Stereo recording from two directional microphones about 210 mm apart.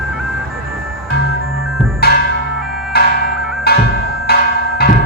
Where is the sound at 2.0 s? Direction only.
50° left (ahead or behind).